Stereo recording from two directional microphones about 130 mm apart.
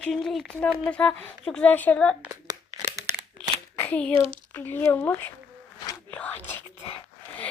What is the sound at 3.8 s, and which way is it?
A woman's voice, 10° left (ahead or behind).